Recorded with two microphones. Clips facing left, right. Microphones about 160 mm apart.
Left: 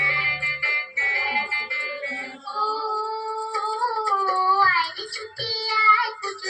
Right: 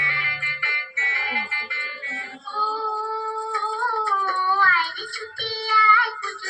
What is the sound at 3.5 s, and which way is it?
Child singing, 35° left (ahead or behind).